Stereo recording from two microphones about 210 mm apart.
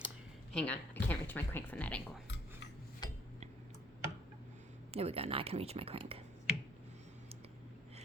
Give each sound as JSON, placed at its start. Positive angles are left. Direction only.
{"t": 0.5, "sound": "speech", "side_deg": 5}
{"t": 3.0, "sound": "a sound", "side_deg": 20}
{"t": 4.9, "sound": "speech", "side_deg": -30}